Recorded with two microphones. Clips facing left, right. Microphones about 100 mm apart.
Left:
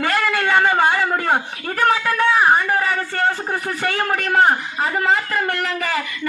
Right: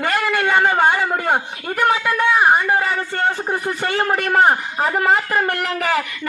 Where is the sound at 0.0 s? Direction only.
5° right (ahead or behind).